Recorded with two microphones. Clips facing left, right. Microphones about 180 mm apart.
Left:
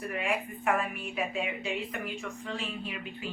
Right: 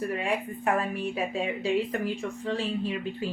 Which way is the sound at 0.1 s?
30° right (ahead or behind).